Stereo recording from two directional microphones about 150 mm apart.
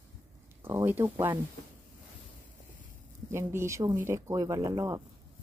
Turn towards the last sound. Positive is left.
turn(degrees=-20)  # may be behind; listen again after turning